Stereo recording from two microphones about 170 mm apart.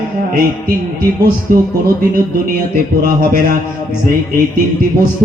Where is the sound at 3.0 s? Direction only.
55° right (ahead or behind).